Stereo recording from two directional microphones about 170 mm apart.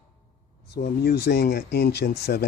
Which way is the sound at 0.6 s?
65° left (ahead or behind).